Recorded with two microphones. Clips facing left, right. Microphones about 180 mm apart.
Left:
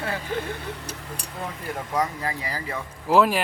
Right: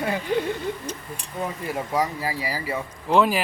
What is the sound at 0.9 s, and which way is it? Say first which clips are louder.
Speech: right 4 dB; 10° left (ahead or behind).